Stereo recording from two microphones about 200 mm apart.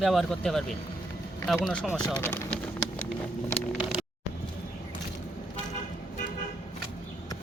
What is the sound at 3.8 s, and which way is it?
Vehicle, 5° right (ahead or behind).